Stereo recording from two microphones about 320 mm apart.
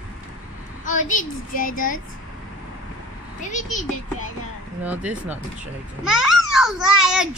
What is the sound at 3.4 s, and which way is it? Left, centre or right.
Speech, left.